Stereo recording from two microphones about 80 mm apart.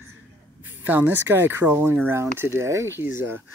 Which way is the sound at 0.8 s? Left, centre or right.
Right.